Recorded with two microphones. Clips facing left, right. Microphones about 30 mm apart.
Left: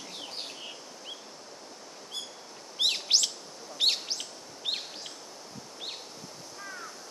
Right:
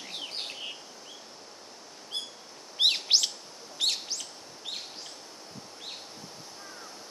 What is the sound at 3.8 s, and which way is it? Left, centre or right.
Bird, centre.